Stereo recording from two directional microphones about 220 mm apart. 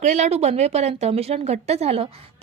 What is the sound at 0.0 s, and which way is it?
A woman's voice, 30° right (ahead or behind).